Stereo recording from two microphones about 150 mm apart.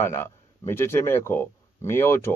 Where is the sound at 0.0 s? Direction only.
15° left (ahead or behind).